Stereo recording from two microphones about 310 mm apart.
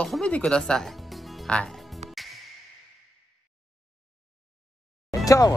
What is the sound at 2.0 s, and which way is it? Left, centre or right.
Music, right.